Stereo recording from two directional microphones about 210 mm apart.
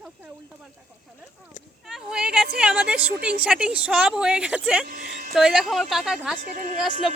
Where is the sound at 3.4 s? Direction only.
5° right (ahead or behind).